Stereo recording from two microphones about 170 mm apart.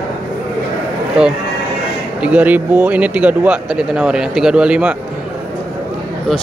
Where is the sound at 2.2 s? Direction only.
10° right (ahead or behind).